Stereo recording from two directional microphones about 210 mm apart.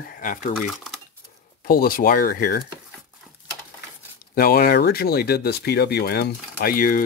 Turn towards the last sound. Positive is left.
turn(degrees=40)  # may be behind; listen again after turning